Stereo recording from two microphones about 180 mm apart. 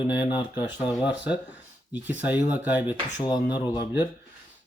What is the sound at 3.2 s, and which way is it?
Speech, 20° left (ahead or behind).